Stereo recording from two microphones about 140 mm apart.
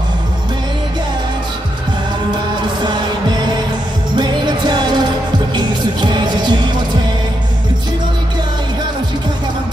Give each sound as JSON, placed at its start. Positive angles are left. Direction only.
{"t": 2.8, "sound": "heart sounds", "side_deg": -35}
{"t": 4.2, "sound": "music", "side_deg": -30}